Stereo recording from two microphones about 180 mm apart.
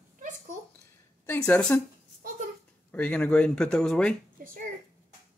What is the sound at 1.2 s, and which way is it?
Speech, 10° left (ahead or behind).